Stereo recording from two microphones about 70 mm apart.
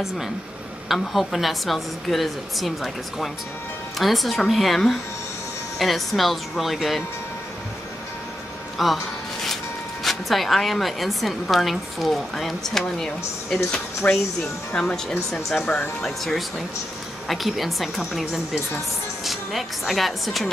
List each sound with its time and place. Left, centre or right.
0.8 s a woman's voice: centre
8.7 s music: centre
10.0 s a woman's voice: centre
14.0 s a woman's voice: left; by 20.4 s centre